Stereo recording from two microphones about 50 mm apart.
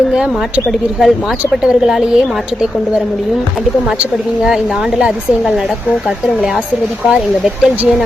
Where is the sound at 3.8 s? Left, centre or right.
Right.